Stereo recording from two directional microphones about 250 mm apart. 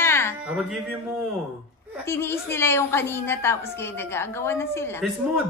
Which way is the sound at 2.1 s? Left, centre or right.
Centre.